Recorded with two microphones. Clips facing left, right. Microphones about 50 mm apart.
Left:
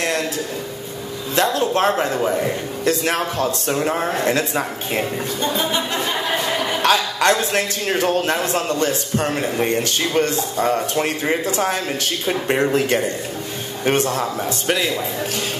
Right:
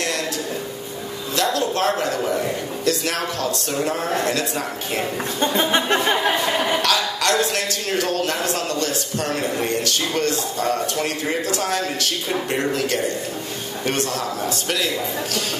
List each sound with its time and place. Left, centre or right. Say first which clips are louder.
1.3 s a man's voice: left 3 dB; left
5.4 s speech: right 3 dB; right
6.8 s a man's voice: left 4 dB; left